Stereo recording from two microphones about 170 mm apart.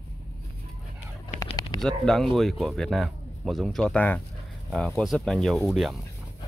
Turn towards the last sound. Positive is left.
turn(degrees=0)  # may be behind; listen again after turning